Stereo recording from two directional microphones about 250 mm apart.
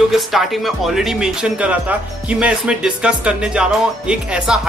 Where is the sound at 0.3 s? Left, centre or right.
Centre.